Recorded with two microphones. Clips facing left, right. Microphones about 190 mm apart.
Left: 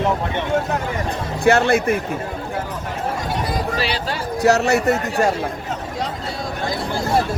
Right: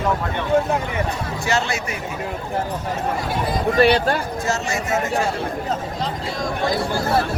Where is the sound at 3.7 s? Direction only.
55° right (ahead or behind).